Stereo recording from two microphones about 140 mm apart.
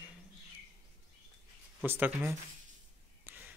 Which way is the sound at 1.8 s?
15° right (ahead or behind).